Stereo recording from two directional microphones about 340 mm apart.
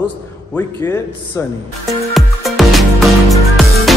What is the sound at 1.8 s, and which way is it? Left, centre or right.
Music, centre.